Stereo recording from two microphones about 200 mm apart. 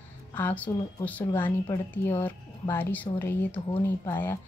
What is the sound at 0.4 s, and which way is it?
A woman's voice, 10° left (ahead or behind).